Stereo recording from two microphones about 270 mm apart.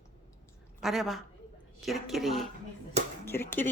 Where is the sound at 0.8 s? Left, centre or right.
Centre.